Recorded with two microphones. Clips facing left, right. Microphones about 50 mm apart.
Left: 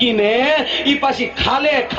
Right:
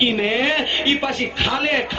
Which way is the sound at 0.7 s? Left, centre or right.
Centre.